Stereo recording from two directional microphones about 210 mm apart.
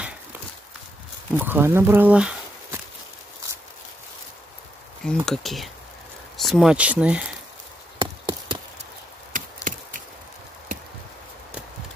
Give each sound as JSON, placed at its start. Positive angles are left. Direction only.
{"t": 1.3, "sound": "speech", "side_deg": -10}
{"t": 5.0, "sound": "speech", "side_deg": 0}
{"t": 8.0, "sound": "a sound", "side_deg": -20}
{"t": 9.3, "sound": "wood", "side_deg": -40}